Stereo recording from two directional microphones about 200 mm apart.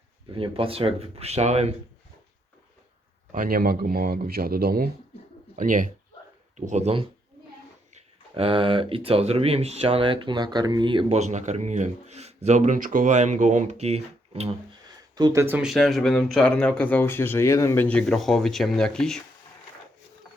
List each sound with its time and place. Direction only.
0.3 s speech: 25° right (ahead or behind)
3.3 s speech: 45° right (ahead or behind); by 11.2 s 25° right (ahead or behind)
11.2 s speech: 35° right (ahead or behind)
15.1 s speech: 20° right (ahead or behind); by 19.2 s 5° left (ahead or behind)